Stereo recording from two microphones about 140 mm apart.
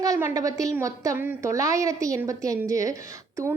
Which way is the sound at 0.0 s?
20° right (ahead or behind).